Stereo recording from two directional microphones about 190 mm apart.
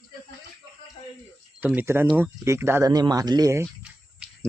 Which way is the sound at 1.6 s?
10° right (ahead or behind).